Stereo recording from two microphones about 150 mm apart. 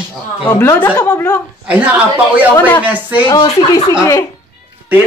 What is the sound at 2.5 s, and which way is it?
Speech, 10° left (ahead or behind).